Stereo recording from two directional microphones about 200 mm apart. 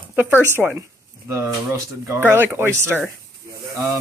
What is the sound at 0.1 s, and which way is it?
Speech, 10° right (ahead or behind).